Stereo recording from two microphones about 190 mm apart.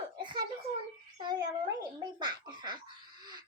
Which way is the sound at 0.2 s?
25° right (ahead or behind).